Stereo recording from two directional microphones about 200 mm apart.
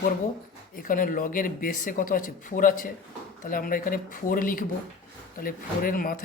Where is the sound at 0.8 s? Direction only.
45° left (ahead or behind).